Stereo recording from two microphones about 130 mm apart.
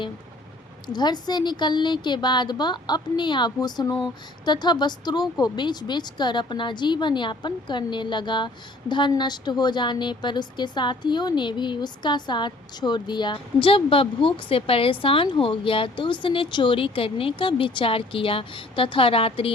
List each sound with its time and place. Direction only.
0.9 s a woman's voice: 35° left (ahead or behind)